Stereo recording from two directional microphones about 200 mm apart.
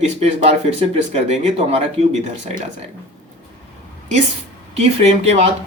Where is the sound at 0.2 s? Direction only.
35° right (ahead or behind).